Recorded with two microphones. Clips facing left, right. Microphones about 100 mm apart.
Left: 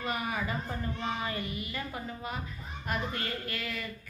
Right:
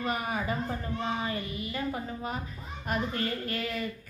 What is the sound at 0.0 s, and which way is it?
Speech, 40° right (ahead or behind).